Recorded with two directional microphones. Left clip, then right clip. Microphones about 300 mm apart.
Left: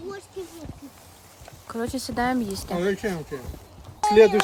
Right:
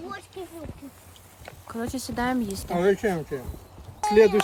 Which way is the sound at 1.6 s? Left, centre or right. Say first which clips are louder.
Left 3 dB; centre.